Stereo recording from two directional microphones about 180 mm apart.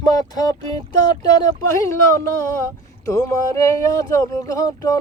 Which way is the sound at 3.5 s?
20° left (ahead or behind).